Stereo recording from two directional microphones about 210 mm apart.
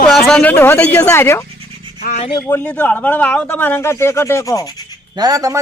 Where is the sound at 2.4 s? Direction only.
10° left (ahead or behind).